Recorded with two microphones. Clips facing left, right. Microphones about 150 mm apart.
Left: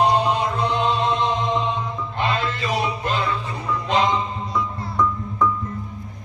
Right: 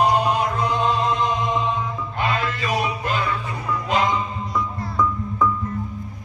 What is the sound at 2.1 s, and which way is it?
Music, 10° right (ahead or behind).